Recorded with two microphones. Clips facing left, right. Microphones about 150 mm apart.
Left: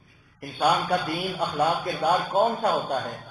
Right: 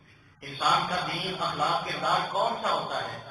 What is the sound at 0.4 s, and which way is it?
Speech, 60° left (ahead or behind).